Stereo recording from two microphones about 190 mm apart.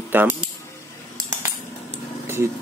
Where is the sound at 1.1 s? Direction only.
15° right (ahead or behind).